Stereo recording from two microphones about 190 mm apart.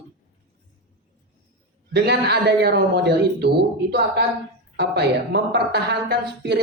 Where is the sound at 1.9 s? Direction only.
60° right (ahead or behind).